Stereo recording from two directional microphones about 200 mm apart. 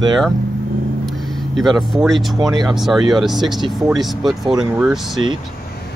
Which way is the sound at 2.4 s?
20° right (ahead or behind).